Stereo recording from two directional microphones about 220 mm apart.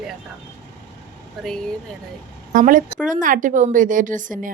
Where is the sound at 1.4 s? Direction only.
Centre (ahead or behind).